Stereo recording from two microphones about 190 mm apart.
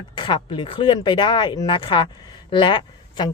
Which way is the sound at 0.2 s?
25° left (ahead or behind).